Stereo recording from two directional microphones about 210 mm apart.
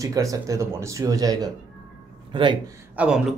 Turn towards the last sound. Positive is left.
turn(degrees=-5)  # may be behind; listen again after turning